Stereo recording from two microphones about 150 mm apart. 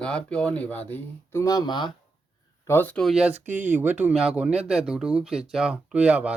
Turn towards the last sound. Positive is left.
turn(degrees=-10)  # may be behind; listen again after turning